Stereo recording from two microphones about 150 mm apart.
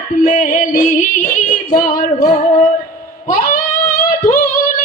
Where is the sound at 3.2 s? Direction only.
60° left (ahead or behind).